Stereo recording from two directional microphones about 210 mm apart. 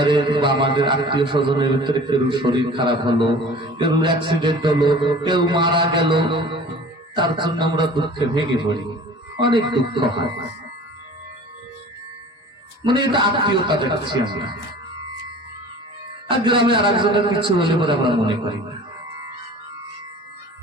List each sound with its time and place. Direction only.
0.0 s a man's voice: 20° right (ahead or behind)
12.8 s a man's voice: 20° right (ahead or behind)
16.4 s a man's voice: 25° right (ahead or behind)